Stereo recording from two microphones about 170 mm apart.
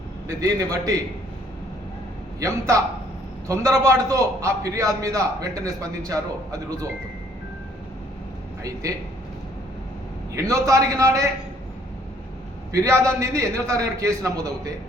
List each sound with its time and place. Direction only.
0.3 s a man's voice: 20° right (ahead or behind)
2.4 s a man's voice: 20° right (ahead or behind)
10.3 s a man's voice: 20° right (ahead or behind)
12.7 s a man's voice: 15° right (ahead or behind)